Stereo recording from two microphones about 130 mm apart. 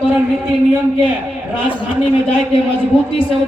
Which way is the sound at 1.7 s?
45° left (ahead or behind).